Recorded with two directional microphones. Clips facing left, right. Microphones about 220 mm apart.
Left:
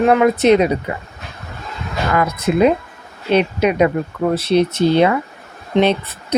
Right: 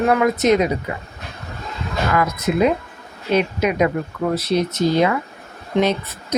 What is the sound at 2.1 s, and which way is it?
Speech, 30° left (ahead or behind).